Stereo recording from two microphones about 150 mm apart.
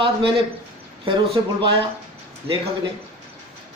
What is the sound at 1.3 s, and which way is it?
A man's voice, 35° right (ahead or behind).